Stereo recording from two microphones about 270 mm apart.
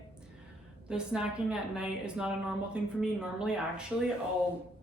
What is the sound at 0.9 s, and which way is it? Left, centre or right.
Speech, centre.